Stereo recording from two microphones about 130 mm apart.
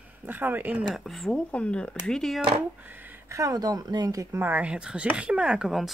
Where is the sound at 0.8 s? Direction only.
Centre (ahead or behind).